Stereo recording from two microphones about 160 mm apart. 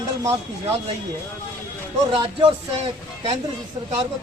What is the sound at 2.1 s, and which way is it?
Speech, 35° right (ahead or behind).